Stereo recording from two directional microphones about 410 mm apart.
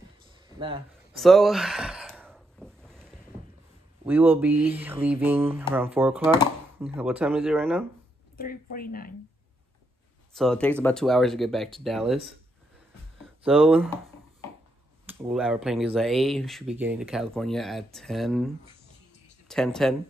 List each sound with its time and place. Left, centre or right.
1.1 s gasp: centre
4.0 s speech: centre
8.4 s speech: left
10.3 s speech: centre
15.0 s speech: centre